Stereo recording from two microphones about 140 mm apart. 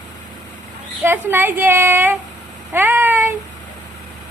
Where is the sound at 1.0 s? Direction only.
15° right (ahead or behind).